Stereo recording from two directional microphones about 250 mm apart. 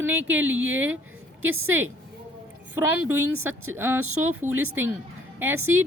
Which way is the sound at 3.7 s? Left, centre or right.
Centre.